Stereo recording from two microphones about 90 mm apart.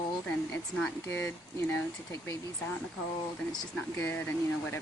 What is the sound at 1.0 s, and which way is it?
Speech, 30° left (ahead or behind).